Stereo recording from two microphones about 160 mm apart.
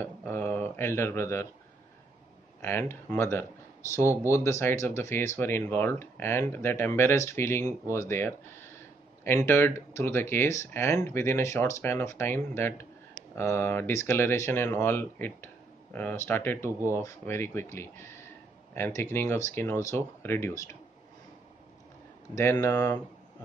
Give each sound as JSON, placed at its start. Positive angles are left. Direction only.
{"t": 0.0, "sound": "speech", "side_deg": 15}
{"t": 2.6, "sound": "speech", "side_deg": 15}
{"t": 22.3, "sound": "speech", "side_deg": 20}